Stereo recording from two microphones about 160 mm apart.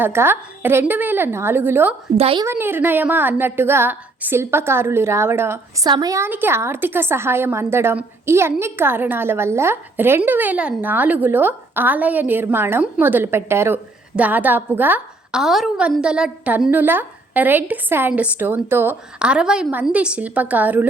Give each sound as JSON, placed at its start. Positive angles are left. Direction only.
{"t": 0.0, "sound": "a woman's voice", "side_deg": -15}
{"t": 2.1, "sound": "a woman's voice", "side_deg": -40}
{"t": 2.4, "sound": "a woman's voice", "side_deg": -15}